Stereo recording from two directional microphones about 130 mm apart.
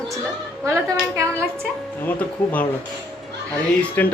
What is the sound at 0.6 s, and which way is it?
Speech, 25° right (ahead or behind).